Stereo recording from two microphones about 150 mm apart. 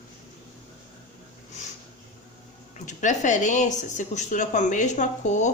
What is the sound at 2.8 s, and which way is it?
Speech, 55° left (ahead or behind).